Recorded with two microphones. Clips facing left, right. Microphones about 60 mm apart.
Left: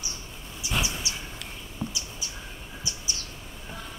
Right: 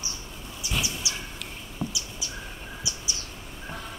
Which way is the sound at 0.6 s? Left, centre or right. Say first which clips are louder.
Left 2 dB; left.